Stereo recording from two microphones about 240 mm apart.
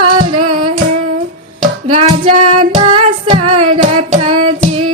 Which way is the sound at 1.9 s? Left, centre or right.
Right.